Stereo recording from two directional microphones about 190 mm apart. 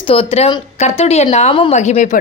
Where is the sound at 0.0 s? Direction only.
30° left (ahead or behind).